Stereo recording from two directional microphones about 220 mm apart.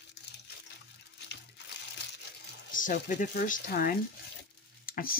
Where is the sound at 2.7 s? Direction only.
35° left (ahead or behind).